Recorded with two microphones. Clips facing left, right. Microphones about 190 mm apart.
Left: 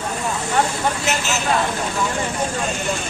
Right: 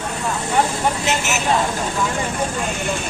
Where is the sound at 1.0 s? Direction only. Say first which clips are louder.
Right 1 dB; 20° right (ahead or behind).